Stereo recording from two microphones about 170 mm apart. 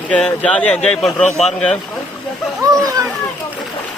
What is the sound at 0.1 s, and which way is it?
Speech, 5° left (ahead or behind).